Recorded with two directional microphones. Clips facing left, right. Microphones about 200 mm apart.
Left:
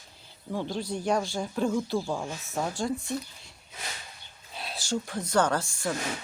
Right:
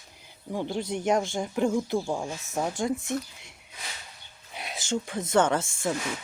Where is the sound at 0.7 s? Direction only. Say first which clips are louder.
Right 3 dB; 20° right (ahead or behind).